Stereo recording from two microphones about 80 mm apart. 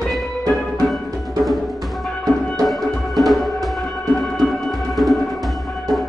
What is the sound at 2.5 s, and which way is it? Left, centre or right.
Music, centre.